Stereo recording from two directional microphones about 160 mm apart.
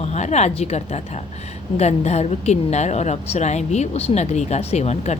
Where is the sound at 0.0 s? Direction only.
45° left (ahead or behind).